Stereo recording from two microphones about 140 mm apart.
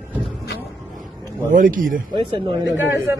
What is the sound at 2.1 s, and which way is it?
Speech, 35° right (ahead or behind).